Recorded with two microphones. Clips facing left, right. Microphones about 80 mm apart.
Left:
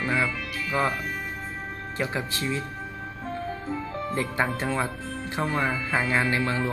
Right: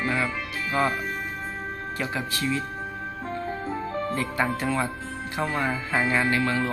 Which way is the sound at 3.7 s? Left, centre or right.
Right.